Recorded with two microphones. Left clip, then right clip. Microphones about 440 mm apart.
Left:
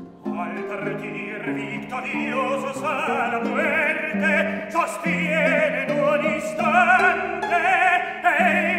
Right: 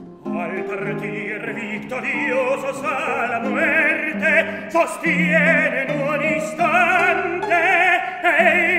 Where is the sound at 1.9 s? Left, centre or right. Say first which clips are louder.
Right 5 dB; right.